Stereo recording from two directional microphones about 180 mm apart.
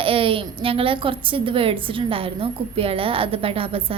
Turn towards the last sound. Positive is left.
turn(degrees=-30)  # may be behind; listen again after turning